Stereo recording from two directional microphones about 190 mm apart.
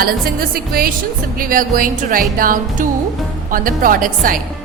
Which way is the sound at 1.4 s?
45° right (ahead or behind).